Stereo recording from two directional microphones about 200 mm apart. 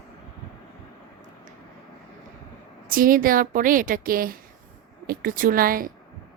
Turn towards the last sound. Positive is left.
turn(degrees=-45)  # may be behind; listen again after turning